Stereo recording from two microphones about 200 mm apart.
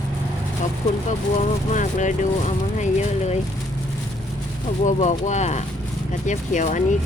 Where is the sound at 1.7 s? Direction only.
40° left (ahead or behind).